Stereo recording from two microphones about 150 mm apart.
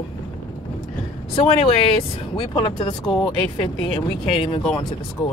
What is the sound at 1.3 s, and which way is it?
Speech, 40° left (ahead or behind).